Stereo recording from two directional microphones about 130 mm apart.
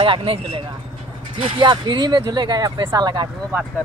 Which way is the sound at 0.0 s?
45° right (ahead or behind).